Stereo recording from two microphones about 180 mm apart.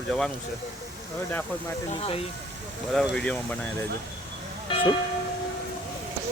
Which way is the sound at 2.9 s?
Centre (ahead or behind).